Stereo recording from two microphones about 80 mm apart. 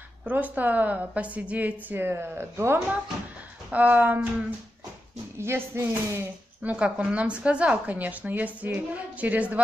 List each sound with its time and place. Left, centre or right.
0.2 s a woman's voice: right
3.7 s a woman's voice: centre
5.4 s speech: right
6.6 s a woman's voice: centre